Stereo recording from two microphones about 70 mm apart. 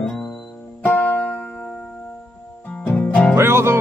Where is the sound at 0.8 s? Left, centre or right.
Left.